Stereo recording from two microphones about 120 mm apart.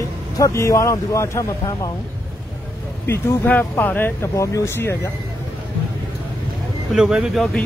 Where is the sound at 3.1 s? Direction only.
15° left (ahead or behind).